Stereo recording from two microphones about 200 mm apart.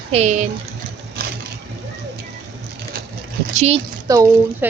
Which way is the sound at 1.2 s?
50° right (ahead or behind).